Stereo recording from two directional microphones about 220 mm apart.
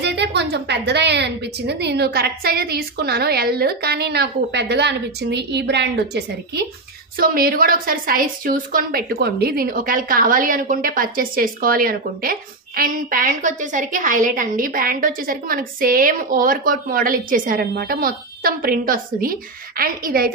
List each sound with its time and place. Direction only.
0.0 s a woman's voice: 50° right (ahead or behind)